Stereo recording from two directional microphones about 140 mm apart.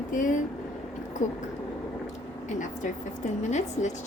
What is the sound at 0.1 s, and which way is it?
Speech, 70° left (ahead or behind).